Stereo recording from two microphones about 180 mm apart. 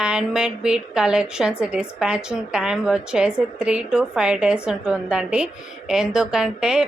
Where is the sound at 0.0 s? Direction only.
5° right (ahead or behind).